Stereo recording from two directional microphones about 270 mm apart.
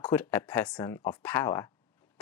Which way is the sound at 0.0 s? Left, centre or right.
Centre.